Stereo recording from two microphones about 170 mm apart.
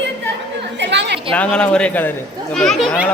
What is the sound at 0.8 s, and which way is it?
Chatter, 90° right.